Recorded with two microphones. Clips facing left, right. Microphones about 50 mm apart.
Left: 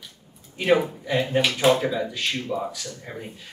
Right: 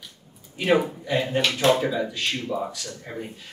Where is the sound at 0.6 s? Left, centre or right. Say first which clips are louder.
Left 1 dB; centre.